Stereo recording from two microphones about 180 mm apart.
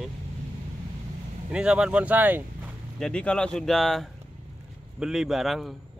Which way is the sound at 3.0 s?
5° left (ahead or behind).